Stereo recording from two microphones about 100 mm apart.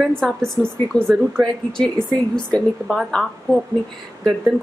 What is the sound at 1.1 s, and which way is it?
A woman's voice, 5° left (ahead or behind).